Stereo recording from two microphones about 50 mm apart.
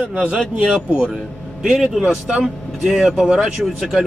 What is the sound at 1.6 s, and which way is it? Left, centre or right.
Speech, centre.